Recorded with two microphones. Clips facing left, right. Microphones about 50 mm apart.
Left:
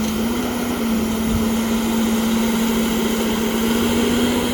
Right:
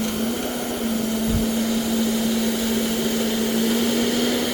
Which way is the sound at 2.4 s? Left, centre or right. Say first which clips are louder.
Left 4 dB; left.